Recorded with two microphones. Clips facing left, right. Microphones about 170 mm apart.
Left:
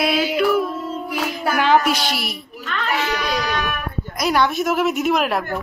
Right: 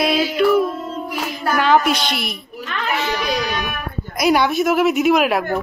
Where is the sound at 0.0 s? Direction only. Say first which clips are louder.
Right 2 dB; 5° left (ahead or behind).